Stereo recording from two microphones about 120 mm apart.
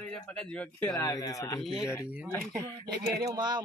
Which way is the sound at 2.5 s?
35° right (ahead or behind).